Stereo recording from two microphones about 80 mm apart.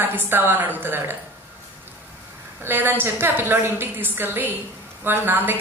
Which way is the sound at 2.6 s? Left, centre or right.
Right.